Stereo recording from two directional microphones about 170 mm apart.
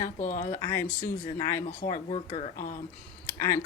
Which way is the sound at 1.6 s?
45° left (ahead or behind).